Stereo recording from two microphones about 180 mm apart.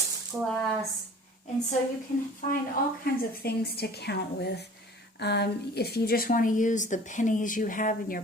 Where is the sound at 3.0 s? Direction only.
55° left (ahead or behind).